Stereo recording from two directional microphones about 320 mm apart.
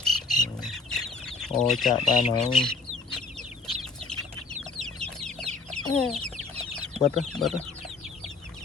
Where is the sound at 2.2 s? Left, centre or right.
Left.